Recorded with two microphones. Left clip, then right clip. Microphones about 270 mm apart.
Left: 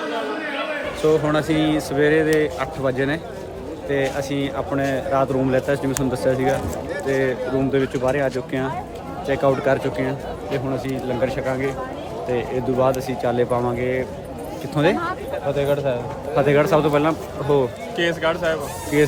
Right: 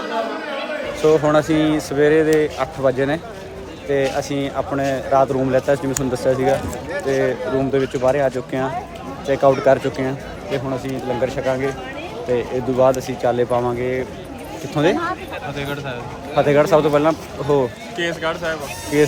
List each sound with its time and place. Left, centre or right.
1.0 s a man's voice: centre
15.5 s speech: left
16.3 s a man's voice: centre